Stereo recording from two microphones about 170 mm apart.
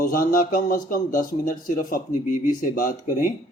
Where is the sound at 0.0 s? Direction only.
55° left (ahead or behind).